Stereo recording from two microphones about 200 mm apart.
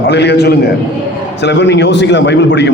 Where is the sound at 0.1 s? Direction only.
55° left (ahead or behind).